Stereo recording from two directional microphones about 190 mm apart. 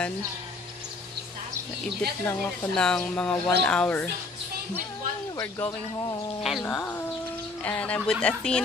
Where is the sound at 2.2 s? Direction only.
5° left (ahead or behind).